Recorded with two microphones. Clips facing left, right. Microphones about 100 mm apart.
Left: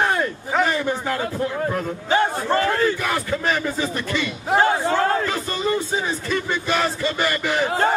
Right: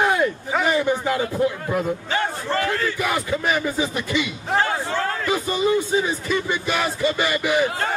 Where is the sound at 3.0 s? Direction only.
10° right (ahead or behind).